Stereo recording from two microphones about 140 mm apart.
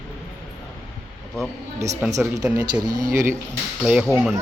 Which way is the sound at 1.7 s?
20° right (ahead or behind).